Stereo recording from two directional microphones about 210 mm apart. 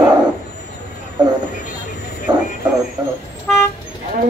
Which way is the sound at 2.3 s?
20° right (ahead or behind).